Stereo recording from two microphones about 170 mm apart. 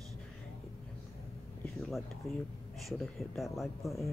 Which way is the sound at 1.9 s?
Centre (ahead or behind).